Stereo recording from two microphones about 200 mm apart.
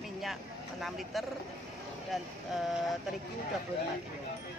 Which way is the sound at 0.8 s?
Centre (ahead or behind).